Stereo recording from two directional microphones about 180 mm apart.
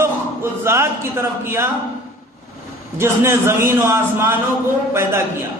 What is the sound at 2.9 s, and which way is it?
A man's voice, 15° right (ahead or behind).